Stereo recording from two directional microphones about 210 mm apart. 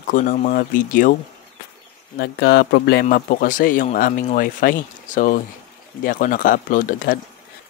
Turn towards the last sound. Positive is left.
turn(degrees=40)  # may be behind; listen again after turning